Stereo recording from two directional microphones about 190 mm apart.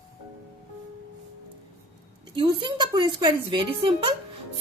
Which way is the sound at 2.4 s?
25° right (ahead or behind).